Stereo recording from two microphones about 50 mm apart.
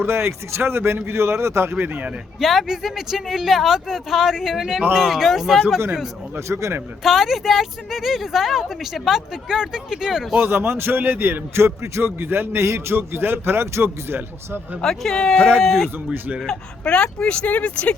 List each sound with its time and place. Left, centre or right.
0.0 s speech: right
1.7 s speech: right
2.4 s speech: centre
6.5 s a man's voice: right
7.0 s speech: centre
10.4 s a man's voice: right
12.6 s a man's voice: right
14.8 s speech: centre
15.6 s speech: centre
16.1 s speech: right
16.8 s speech: centre